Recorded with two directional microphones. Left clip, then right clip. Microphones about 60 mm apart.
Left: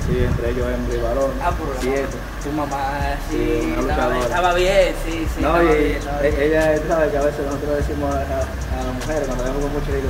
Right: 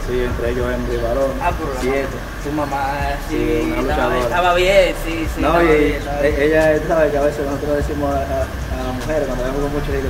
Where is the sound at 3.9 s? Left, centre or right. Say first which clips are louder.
Right 2 dB; centre.